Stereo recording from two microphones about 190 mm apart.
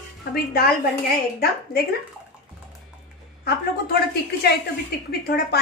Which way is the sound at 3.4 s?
55° left (ahead or behind).